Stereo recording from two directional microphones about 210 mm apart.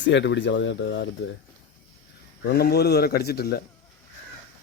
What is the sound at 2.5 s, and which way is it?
Speech, 50° left (ahead or behind).